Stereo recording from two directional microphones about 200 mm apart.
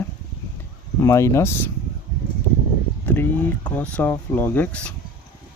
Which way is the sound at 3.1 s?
10° left (ahead or behind).